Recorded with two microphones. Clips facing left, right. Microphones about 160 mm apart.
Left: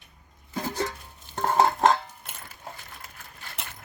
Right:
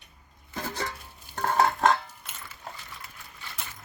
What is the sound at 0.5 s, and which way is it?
Music, 15° left (ahead or behind).